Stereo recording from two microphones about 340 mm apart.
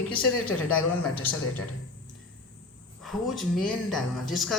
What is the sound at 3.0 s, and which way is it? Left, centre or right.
Speech, centre.